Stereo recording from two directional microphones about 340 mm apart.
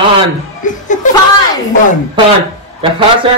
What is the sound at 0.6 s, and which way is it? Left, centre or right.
Speech, left.